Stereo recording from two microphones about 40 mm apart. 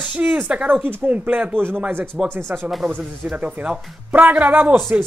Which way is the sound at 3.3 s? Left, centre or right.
Right.